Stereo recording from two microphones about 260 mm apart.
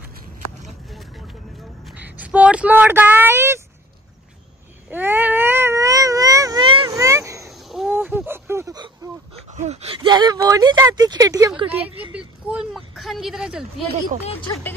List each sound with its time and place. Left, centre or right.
0.8 s vehicle: centre
1.9 s speech: centre
4.9 s baby cry: centre
7.4 s a sound: centre
12.0 s speech: centre
14.2 s speech: left